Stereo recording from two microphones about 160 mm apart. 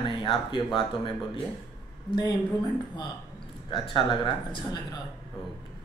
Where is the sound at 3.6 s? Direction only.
30° left (ahead or behind).